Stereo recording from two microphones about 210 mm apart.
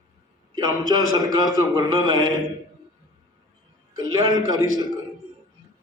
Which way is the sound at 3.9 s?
20° right (ahead or behind).